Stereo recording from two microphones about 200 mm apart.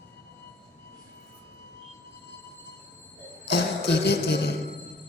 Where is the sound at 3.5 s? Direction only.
55° left (ahead or behind).